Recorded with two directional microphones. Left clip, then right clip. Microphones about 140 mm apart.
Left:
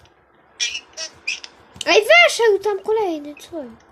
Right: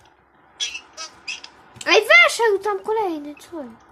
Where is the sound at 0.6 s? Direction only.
40° left (ahead or behind).